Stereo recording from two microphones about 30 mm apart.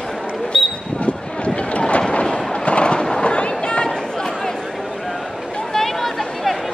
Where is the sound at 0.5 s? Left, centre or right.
Left.